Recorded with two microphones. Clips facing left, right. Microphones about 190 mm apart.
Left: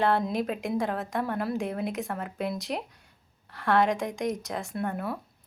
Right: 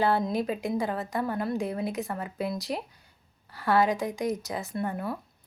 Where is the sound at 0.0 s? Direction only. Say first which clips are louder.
Even; centre (ahead or behind).